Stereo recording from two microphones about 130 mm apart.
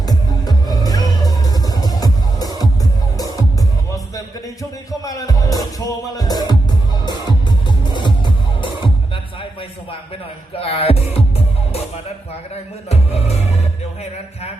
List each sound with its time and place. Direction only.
0.0 s music: 30° left (ahead or behind)
4.9 s music: 25° left (ahead or behind)
10.5 s music: 45° left (ahead or behind)
12.9 s music: 50° left (ahead or behind)